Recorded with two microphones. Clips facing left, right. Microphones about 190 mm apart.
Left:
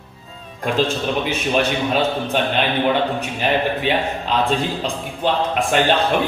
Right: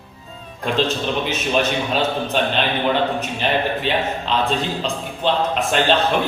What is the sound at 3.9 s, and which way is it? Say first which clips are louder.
A man's voice: left 1 dB; 10° left (ahead or behind).